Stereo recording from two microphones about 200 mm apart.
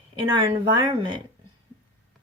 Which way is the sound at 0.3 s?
25° right (ahead or behind).